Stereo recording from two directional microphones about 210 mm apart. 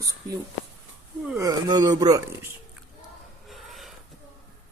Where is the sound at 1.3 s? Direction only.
15° right (ahead or behind).